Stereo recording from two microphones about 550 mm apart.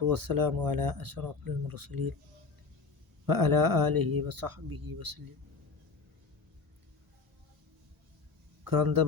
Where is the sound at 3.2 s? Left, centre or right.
Right.